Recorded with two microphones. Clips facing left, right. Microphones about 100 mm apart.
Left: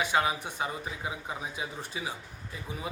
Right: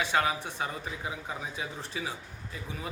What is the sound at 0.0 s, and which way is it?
Speech, 15° left (ahead or behind).